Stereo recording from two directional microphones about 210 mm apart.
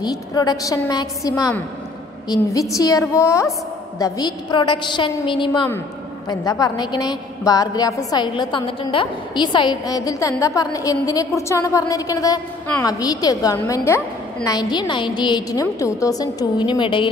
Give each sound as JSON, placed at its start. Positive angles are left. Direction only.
{"t": 0.0, "sound": "a woman's voice", "side_deg": 20}